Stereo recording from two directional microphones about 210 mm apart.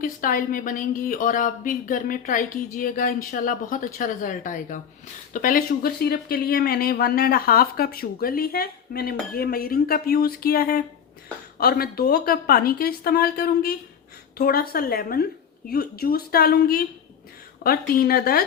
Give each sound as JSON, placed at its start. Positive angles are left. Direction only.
{"t": 0.0, "sound": "a woman's voice", "side_deg": 40}